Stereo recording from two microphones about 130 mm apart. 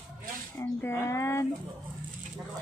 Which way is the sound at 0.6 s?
20° left (ahead or behind).